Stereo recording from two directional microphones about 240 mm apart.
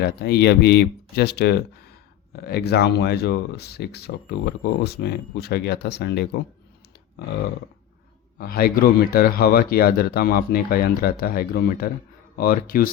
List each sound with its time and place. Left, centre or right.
0.2 s speech: left
8.4 s speech: left